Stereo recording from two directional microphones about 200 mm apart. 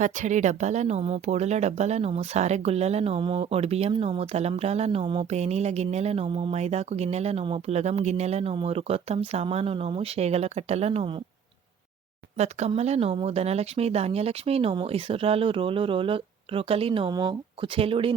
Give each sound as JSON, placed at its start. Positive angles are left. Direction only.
{"t": 0.0, "sound": "speech", "side_deg": -35}
{"t": 12.4, "sound": "speech", "side_deg": -35}